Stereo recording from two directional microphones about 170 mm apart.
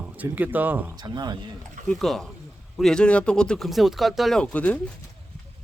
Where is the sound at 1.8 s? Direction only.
Centre (ahead or behind).